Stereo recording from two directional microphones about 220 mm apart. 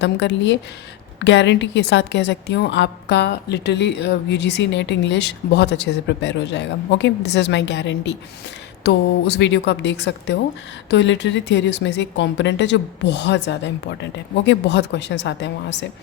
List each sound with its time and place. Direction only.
0.0 s a woman's voice: 55° left (ahead or behind)